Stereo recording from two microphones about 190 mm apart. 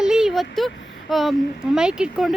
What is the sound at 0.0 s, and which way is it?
Speech, centre (ahead or behind).